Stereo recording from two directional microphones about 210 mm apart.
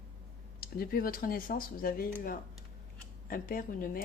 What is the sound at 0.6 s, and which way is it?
Speech, 45° left (ahead or behind).